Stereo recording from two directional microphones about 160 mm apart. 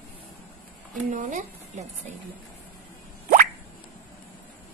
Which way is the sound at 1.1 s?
55° right (ahead or behind).